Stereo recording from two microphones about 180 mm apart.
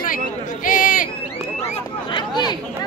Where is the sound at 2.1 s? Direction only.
25° left (ahead or behind).